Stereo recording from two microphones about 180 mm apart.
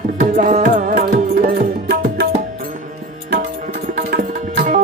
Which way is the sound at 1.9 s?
65° right (ahead or behind).